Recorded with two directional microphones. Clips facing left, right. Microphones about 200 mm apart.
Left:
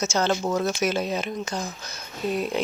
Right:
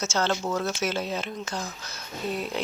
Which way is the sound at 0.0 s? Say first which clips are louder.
Left 3 dB; 15° left (ahead or behind).